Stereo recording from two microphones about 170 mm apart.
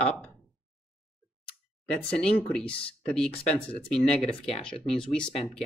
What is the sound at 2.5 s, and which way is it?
Speech, 5° left (ahead or behind).